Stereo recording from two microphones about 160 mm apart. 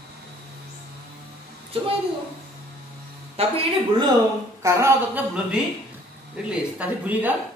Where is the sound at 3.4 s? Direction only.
35° right (ahead or behind).